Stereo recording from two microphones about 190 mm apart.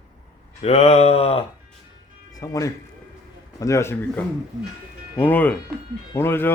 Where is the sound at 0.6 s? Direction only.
35° left (ahead or behind).